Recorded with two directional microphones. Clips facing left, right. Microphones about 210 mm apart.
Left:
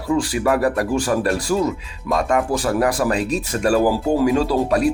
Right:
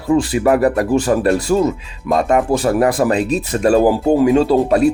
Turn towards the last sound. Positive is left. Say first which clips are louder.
# right 5 dB
turn(degrees=-25)  # may be behind; listen again after turning